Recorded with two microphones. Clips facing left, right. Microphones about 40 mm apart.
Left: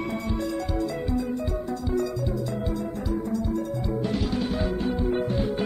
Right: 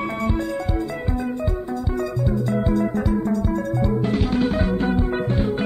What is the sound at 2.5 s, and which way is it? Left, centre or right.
Music, right.